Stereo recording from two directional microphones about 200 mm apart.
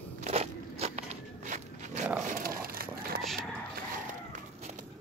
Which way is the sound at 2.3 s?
45° right (ahead or behind).